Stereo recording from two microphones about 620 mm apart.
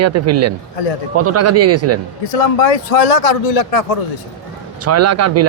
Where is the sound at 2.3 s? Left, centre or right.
Left.